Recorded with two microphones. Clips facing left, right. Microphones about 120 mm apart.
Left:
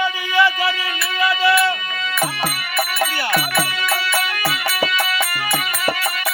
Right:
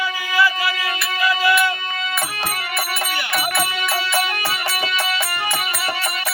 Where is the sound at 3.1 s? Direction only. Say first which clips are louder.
Left 2 dB; 40° left (ahead or behind).